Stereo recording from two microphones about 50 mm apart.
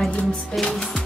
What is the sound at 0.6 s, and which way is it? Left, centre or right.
Speech, centre.